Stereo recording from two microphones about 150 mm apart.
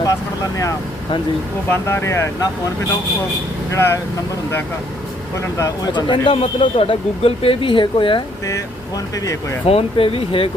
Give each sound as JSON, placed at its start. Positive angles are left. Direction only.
{"t": 0.0, "sound": "speech", "side_deg": 25}
{"t": 1.7, "sound": "speech", "side_deg": 15}
{"t": 3.7, "sound": "speech", "side_deg": 20}
{"t": 5.5, "sound": "a man's voice", "side_deg": 25}
{"t": 9.1, "sound": "speech", "side_deg": 25}
{"t": 9.6, "sound": "a man's voice", "side_deg": 40}